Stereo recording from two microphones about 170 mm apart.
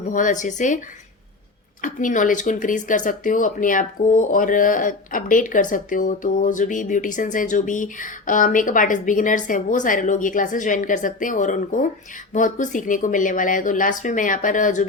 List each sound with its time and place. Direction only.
0.1 s speech: 50° left (ahead or behind)
1.8 s speech: 50° left (ahead or behind)